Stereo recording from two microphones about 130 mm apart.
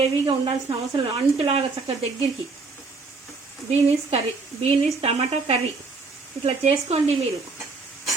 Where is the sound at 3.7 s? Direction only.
50° right (ahead or behind).